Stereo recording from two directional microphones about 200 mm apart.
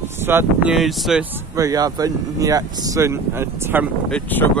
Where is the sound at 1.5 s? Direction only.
15° right (ahead or behind).